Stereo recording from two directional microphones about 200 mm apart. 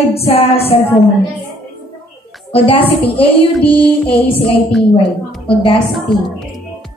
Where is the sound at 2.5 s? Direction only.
25° left (ahead or behind).